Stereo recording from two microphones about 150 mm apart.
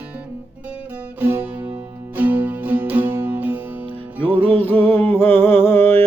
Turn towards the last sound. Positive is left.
turn(degrees=15)  # may be behind; listen again after turning